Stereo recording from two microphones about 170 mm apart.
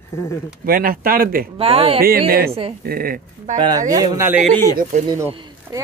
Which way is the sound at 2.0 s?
60° right (ahead or behind).